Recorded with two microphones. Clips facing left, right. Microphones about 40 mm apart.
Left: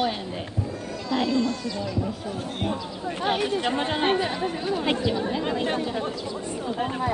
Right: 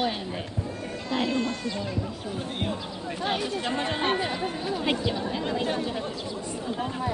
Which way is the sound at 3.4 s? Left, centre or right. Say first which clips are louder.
Left 4 dB; left.